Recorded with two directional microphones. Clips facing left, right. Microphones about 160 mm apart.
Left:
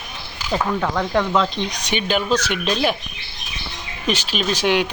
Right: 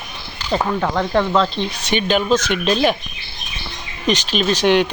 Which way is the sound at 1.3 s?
15° left (ahead or behind).